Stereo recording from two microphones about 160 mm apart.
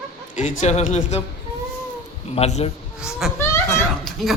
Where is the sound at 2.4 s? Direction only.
40° left (ahead or behind).